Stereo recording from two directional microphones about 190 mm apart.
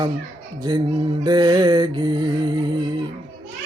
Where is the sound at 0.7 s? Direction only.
20° right (ahead or behind).